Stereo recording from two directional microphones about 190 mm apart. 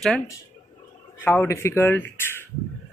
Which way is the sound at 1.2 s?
10° left (ahead or behind).